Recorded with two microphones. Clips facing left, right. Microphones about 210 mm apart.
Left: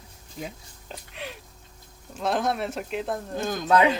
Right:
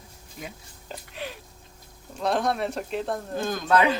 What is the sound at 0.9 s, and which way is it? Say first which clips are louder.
Speech: right 2 dB; centre (ahead or behind).